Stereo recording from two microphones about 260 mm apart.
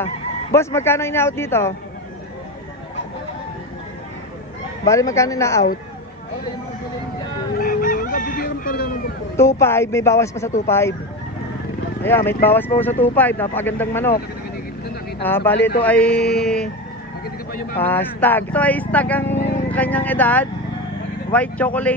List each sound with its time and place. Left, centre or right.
0.0 s speech: centre
4.8 s speech: centre
7.5 s chicken: left
9.4 s speech: centre
12.0 s speech: centre
15.2 s speech: centre
16.2 s a sound: left
16.4 s speech: centre
17.7 s speech: centre